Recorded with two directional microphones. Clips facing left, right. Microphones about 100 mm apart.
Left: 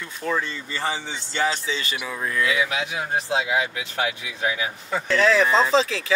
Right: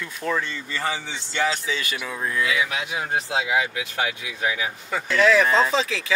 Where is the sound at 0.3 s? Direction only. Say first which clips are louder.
Even; 25° left (ahead or behind).